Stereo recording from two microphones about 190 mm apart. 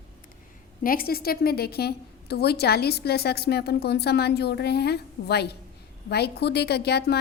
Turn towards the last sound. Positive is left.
turn(degrees=60)  # may be behind; listen again after turning